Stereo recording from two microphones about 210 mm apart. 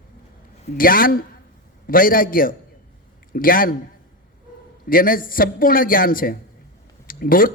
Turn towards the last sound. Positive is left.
turn(degrees=40)  # may be behind; listen again after turning